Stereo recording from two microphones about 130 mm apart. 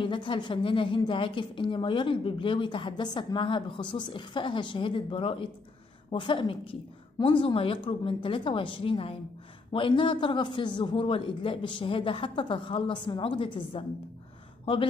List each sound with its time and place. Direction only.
0.0 s a woman's voice: 40° left (ahead or behind)